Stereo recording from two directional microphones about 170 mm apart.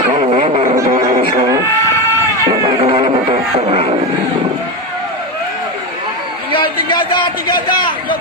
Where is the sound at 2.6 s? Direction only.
30° right (ahead or behind).